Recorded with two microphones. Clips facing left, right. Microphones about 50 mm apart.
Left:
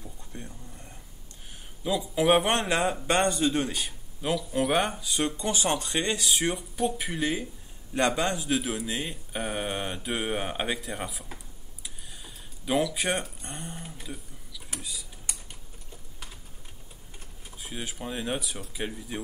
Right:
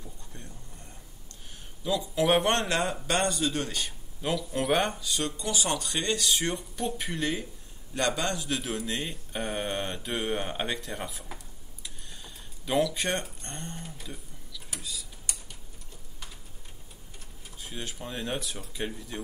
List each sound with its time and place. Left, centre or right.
0.0 s a sound: left
1.9 s speech: centre
3.1 s speech: left; by 4.9 s centre
4.9 s speech: centre
5.4 s speech: left; by 7.4 s centre
7.9 s speech: centre
8.6 s speech: centre
11.8 s a sound: centre
14.8 s speech: centre
17.6 s speech: centre